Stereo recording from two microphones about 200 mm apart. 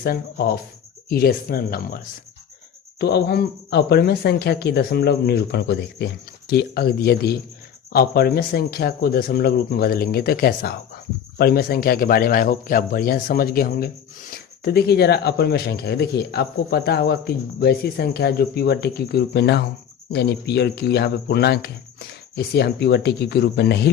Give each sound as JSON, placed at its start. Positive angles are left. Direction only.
{"t": 0.0, "sound": "speech", "side_deg": 50}
{"t": 3.0, "sound": "speech", "side_deg": 55}